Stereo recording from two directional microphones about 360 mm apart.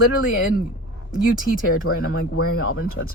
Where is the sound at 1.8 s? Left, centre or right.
Left.